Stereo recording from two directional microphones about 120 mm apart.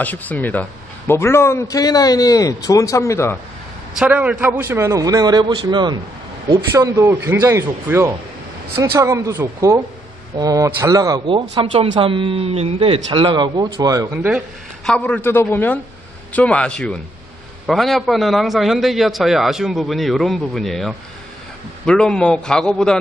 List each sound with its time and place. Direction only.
0.0 s a man's voice: 15° left (ahead or behind)
4.0 s a man's voice: 10° right (ahead or behind); by 5.9 s 40° right (ahead or behind)
6.7 s a man's voice: 20° right (ahead or behind)
11.5 s speech: 45° right (ahead or behind)
13.7 s a man's voice: 30° right (ahead or behind)
14.9 s a man's voice: 10° left (ahead or behind)